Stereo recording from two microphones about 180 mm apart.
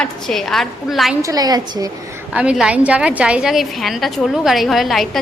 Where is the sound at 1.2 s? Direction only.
20° right (ahead or behind).